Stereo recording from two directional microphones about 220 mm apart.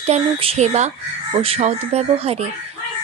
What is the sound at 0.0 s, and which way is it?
A woman's voice, 25° right (ahead or behind).